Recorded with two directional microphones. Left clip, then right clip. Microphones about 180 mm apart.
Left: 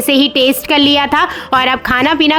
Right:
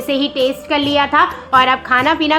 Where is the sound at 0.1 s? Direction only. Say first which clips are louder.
Left 5 dB; 55° left (ahead or behind).